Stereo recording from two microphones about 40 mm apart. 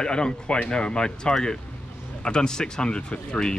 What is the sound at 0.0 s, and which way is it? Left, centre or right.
Speech, centre.